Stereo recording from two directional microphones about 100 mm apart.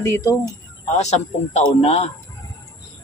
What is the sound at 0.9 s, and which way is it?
Speech, 90° left.